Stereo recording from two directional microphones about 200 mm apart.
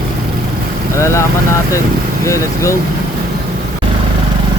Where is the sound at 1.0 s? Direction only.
15° left (ahead or behind).